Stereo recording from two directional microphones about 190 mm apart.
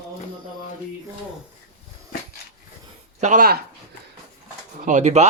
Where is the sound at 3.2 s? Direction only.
45° right (ahead or behind).